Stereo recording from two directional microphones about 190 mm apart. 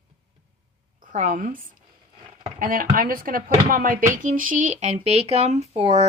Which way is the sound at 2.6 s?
45° right (ahead or behind).